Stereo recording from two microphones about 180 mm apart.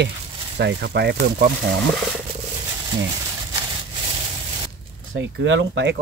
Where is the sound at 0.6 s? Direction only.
70° right (ahead or behind).